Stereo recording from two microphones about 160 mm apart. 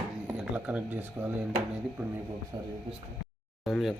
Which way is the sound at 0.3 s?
10° right (ahead or behind).